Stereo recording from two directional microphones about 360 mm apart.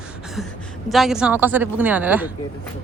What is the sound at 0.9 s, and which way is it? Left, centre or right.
Speech, centre.